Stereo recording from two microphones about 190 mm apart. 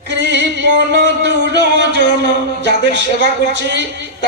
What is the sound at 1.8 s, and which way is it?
Music, 65° right (ahead or behind).